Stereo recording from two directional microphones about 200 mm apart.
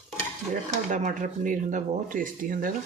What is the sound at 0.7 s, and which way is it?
Speech, 35° right (ahead or behind).